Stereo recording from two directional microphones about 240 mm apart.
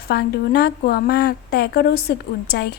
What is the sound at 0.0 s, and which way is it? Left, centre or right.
A woman's voice, left.